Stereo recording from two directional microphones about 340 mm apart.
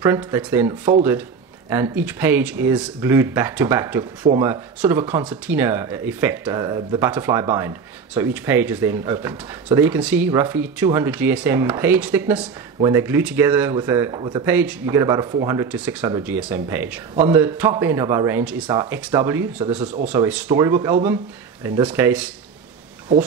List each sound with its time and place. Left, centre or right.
0.0 s speech: centre